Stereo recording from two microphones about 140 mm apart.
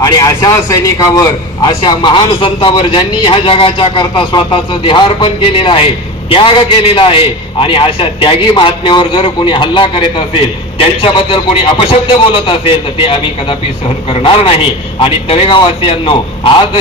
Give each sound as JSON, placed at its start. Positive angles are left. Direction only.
{"t": 0.0, "sound": "a man's voice", "side_deg": 25}